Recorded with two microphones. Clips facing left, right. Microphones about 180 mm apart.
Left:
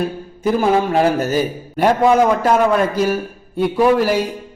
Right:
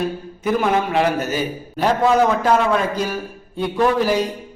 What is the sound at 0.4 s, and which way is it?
Speech, 30° left (ahead or behind).